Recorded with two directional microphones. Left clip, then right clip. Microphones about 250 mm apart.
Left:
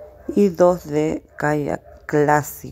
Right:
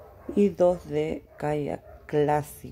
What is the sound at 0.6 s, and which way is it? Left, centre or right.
Speech, centre.